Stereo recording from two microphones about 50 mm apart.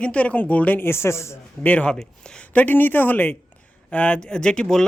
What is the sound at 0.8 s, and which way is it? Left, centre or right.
Speech, left.